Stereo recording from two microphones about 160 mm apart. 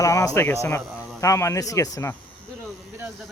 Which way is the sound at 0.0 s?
20° left (ahead or behind).